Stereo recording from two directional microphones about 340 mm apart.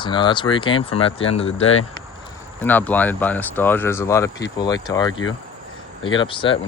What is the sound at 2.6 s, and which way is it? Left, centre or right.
Speech, centre.